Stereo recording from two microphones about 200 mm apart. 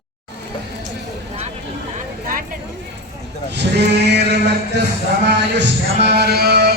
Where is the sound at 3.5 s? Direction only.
60° right (ahead or behind).